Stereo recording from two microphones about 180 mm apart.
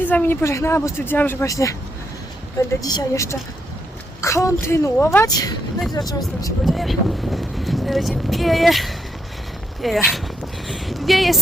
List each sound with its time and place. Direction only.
0.0 s speech: 10° left (ahead or behind)
6.7 s speech: centre (ahead or behind)